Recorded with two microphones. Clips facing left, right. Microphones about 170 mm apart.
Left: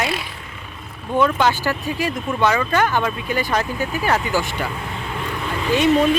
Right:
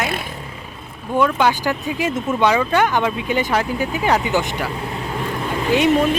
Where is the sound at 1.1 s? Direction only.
10° right (ahead or behind).